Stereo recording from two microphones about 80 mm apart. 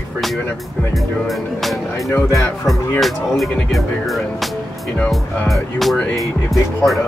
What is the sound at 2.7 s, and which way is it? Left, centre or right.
Speech, centre.